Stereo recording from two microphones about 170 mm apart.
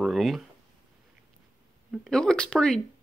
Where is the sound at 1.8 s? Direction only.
Centre (ahead or behind).